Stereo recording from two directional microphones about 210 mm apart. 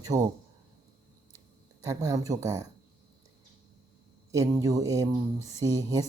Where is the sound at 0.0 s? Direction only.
15° right (ahead or behind).